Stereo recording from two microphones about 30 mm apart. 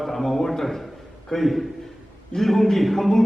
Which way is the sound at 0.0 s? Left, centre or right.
Centre.